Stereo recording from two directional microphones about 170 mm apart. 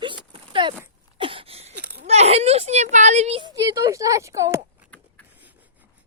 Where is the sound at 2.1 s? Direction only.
40° right (ahead or behind).